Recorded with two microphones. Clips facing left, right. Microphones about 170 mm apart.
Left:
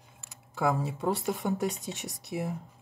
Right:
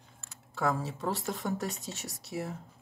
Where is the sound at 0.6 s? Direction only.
15° left (ahead or behind).